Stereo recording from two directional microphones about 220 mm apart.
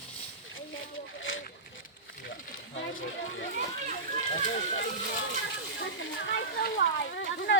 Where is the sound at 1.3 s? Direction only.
60° left (ahead or behind).